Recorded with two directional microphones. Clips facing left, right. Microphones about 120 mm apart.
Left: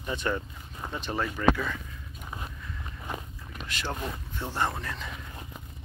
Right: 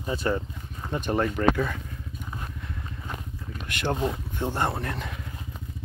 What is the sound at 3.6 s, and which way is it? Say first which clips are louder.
Boat: right 5 dB; 55° right (ahead or behind).